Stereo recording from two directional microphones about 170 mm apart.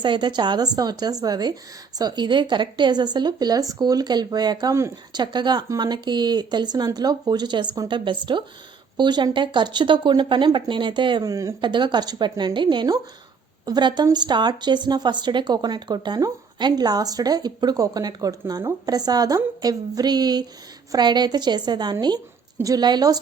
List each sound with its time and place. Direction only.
0.0 s a woman's voice: 25° right (ahead or behind)